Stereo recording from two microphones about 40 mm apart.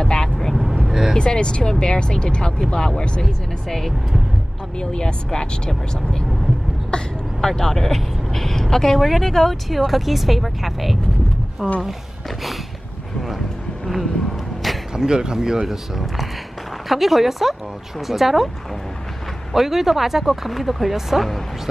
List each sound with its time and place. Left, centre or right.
0.0 s vehicle: centre
0.5 s vehicle: centre
1.1 s speech: left
4.7 s speech: left
7.4 s speech: centre
15.0 s speech: centre
16.9 s speech: centre
19.5 s speech: centre